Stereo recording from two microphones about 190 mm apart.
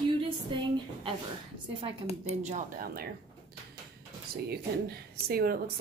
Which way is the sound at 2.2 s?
40° right (ahead or behind).